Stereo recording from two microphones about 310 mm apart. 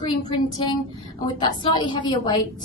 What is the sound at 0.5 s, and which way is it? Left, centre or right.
A woman's voice, centre.